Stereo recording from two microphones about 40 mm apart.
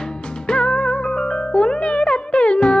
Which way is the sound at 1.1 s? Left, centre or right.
Centre.